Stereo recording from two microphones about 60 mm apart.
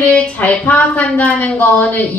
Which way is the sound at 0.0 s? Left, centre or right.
Left.